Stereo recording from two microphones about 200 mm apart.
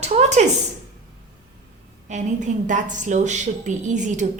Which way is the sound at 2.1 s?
35° right (ahead or behind).